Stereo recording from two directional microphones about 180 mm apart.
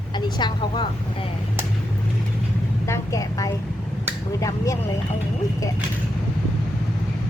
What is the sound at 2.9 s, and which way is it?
Speech, 20° left (ahead or behind).